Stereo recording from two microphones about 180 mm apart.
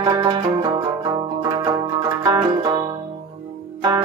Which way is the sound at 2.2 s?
25° right (ahead or behind).